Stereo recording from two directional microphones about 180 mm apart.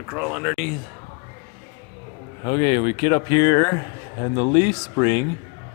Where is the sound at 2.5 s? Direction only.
25° left (ahead or behind).